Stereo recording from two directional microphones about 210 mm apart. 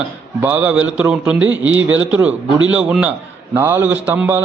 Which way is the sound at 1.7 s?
65° right (ahead or behind).